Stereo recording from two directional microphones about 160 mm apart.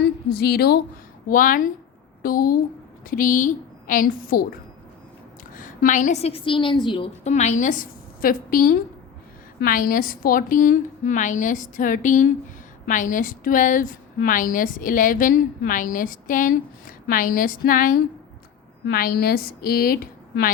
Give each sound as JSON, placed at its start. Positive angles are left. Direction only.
{"t": 0.3, "sound": "a woman's voice", "side_deg": 85}
{"t": 1.3, "sound": "a woman's voice", "side_deg": 60}
{"t": 5.5, "sound": "a woman's voice", "side_deg": 55}
{"t": 7.3, "sound": "a woman's voice", "side_deg": 45}